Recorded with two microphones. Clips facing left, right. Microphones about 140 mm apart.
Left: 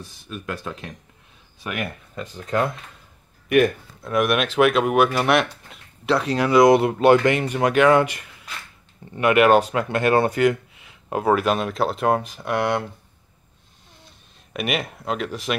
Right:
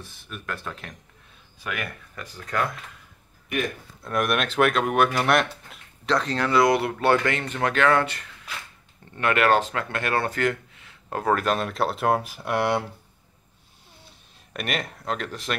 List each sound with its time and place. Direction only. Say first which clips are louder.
0.0 s speech: left 4 dB; 15° left (ahead or behind)
3.4 s speech: left 11 dB; 70° left (ahead or behind)
4.0 s speech: left 4 dB; centre (ahead or behind)
14.5 s speech: left 4 dB; 5° left (ahead or behind)